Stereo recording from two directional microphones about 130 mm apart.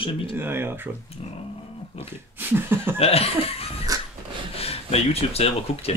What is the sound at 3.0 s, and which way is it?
Speech, 50° left (ahead or behind).